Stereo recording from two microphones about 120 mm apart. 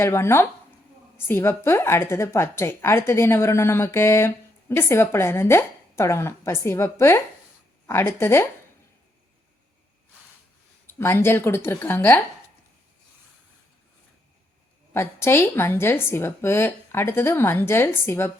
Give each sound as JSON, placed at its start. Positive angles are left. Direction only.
{"t": 0.0, "sound": "a woman's voice", "side_deg": 20}
{"t": 10.9, "sound": "a woman's voice", "side_deg": 20}
{"t": 14.9, "sound": "a woman's voice", "side_deg": 20}